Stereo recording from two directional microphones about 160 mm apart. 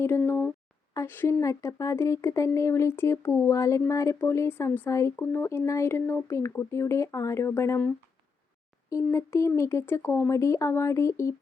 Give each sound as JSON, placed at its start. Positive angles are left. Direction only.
{"t": 0.0, "sound": "speech", "side_deg": 15}